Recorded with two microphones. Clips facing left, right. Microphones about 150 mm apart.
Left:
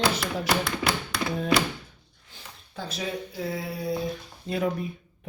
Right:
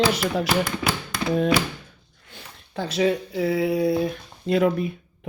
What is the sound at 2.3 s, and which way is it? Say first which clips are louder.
Speech: right 7 dB; 75° right (ahead or behind).